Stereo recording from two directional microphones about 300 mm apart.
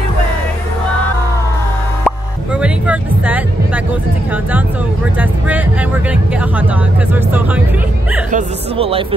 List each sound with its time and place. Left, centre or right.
2.0 s music: centre
4.3 s vehicle: centre
5.1 s music: centre
8.3 s speech: right